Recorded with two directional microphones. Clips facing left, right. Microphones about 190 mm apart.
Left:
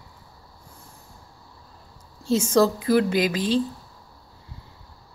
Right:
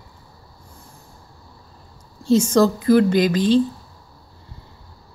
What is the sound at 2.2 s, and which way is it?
Speech, 5° left (ahead or behind).